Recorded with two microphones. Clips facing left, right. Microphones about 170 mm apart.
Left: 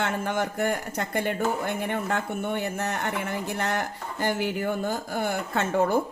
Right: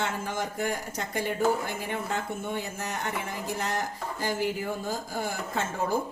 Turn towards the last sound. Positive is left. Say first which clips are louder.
# left 6 dB
turn(degrees=65)  # may be behind; listen again after turning